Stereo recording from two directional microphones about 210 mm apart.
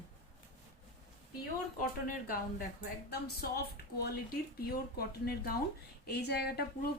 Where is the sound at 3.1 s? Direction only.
50° left (ahead or behind).